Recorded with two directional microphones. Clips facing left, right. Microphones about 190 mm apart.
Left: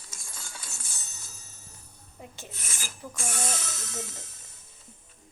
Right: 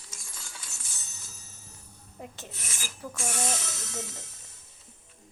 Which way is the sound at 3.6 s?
50° left (ahead or behind).